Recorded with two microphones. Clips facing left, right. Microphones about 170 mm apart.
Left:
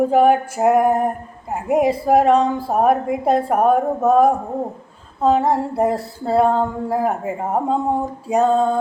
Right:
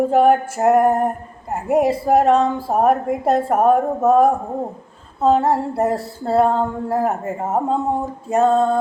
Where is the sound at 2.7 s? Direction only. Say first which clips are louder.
Even; 5° left (ahead or behind).